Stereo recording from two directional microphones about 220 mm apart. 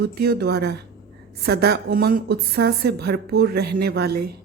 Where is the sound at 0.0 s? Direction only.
45° right (ahead or behind).